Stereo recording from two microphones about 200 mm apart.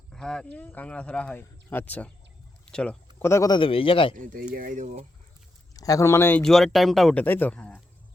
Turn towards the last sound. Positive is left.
turn(degrees=5)  # may be behind; listen again after turning